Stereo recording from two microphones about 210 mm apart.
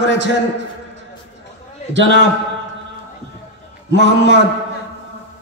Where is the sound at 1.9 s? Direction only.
60° right (ahead or behind).